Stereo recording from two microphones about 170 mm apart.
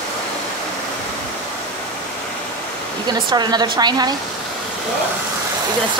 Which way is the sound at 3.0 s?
25° right (ahead or behind).